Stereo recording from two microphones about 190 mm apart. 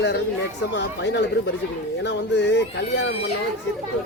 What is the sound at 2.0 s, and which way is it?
Music, 65° left (ahead or behind).